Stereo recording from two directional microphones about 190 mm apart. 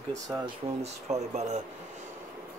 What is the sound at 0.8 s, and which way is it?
Speech, 35° right (ahead or behind).